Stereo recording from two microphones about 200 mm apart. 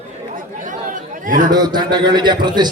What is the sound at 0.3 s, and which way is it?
Chatter, 40° right (ahead or behind).